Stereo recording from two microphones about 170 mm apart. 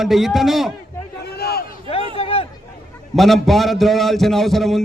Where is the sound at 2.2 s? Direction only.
35° left (ahead or behind).